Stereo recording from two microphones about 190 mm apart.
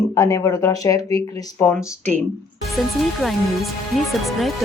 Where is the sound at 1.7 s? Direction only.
5° left (ahead or behind).